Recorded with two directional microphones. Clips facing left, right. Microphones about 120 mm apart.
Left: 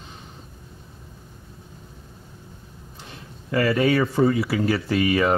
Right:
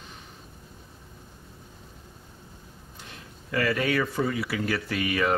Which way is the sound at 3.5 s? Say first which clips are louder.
Left 6 dB; 30° left (ahead or behind).